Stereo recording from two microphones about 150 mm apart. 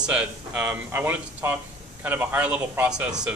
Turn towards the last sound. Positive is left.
turn(degrees=-5)  # may be behind; listen again after turning